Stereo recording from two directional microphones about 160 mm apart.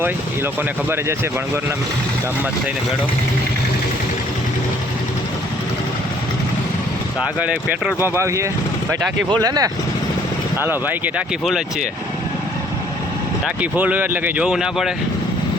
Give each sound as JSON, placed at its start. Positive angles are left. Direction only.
{"t": 7.3, "sound": "speech", "side_deg": -10}
{"t": 10.6, "sound": "speech", "side_deg": -10}
{"t": 13.6, "sound": "speech", "side_deg": -10}